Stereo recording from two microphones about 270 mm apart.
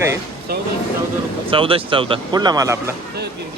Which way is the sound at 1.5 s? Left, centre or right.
Centre.